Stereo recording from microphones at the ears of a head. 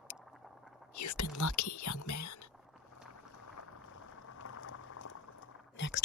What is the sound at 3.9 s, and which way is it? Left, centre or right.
Boiling, left.